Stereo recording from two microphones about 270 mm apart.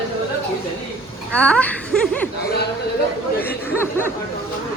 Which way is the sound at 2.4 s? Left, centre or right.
Left.